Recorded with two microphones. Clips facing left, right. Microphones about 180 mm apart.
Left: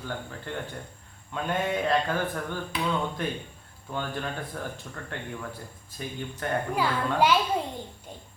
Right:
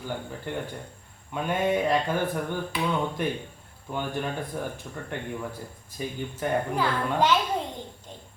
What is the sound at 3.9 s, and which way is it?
Speech, 10° right (ahead or behind).